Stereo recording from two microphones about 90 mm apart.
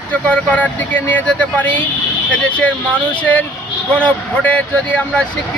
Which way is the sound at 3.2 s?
15° left (ahead or behind).